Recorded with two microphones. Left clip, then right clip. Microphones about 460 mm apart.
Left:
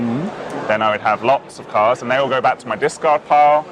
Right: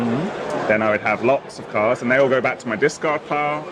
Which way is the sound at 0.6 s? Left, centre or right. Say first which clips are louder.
Left 3 dB; left.